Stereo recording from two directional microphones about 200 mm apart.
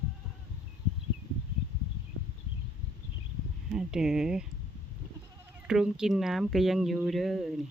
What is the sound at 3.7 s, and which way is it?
Speech, 5° right (ahead or behind).